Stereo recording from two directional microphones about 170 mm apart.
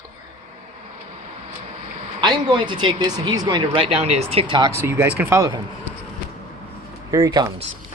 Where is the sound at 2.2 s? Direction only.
25° right (ahead or behind).